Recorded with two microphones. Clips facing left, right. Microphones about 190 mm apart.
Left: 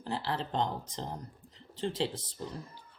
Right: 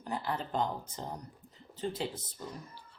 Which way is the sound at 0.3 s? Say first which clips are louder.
Even; 30° left (ahead or behind).